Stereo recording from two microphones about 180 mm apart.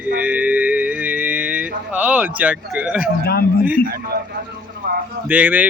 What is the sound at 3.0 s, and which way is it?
Speech, 60° left (ahead or behind).